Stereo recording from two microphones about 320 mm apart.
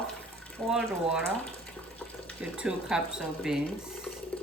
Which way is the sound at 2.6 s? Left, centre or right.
Centre.